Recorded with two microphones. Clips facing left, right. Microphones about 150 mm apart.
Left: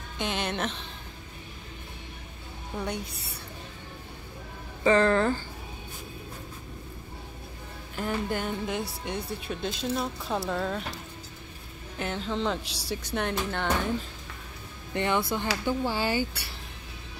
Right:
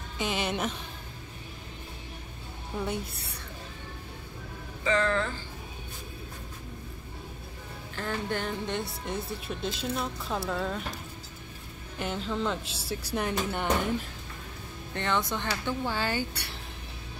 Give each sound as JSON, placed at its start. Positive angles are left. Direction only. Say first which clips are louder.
{"t": 0.2, "sound": "speech", "louder": "even", "side_deg": -5}
{"t": 4.8, "sound": "speech", "louder": "left 5 dB", "side_deg": 40}
{"t": 7.9, "sound": "speech", "louder": "left 2 dB", "side_deg": 10}
{"t": 12.0, "sound": "speech", "louder": "left 1 dB", "side_deg": 0}
{"t": 15.0, "sound": "speech", "louder": "left 3 dB", "side_deg": 10}